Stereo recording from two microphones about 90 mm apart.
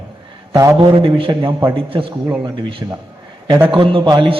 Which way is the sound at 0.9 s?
65° right (ahead or behind).